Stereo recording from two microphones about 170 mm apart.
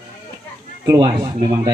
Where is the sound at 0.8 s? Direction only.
20° right (ahead or behind).